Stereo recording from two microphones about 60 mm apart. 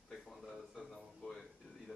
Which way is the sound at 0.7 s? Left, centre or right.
Centre.